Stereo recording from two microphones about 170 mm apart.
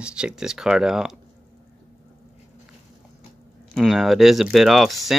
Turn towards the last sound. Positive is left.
turn(degrees=0)  # may be behind; listen again after turning